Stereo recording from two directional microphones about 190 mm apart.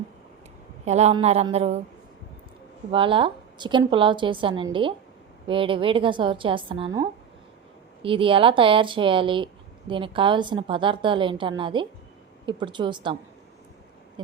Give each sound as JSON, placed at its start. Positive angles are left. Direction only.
{"t": 0.9, "sound": "speech", "side_deg": -35}
{"t": 2.9, "sound": "a woman's voice", "side_deg": -25}